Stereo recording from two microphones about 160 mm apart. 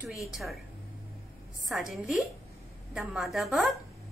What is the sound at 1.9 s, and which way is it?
A woman's voice, centre (ahead or behind).